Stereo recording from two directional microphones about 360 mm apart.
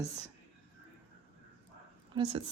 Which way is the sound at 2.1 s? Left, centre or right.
Centre.